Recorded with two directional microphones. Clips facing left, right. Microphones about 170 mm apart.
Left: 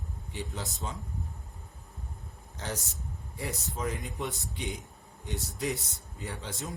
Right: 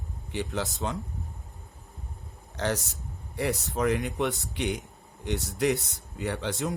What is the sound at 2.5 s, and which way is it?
Speech, 70° right (ahead or behind).